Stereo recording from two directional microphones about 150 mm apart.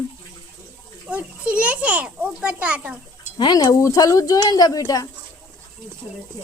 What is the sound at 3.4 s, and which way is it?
Speech, 25° left (ahead or behind).